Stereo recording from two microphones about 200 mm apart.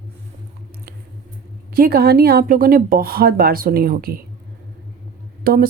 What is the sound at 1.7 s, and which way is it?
A woman's voice, 50° right (ahead or behind).